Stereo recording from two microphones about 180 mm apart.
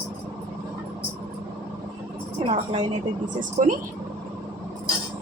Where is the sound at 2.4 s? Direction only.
35° right (ahead or behind).